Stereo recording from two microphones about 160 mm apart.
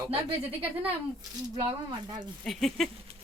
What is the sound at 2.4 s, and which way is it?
Speech, centre (ahead or behind).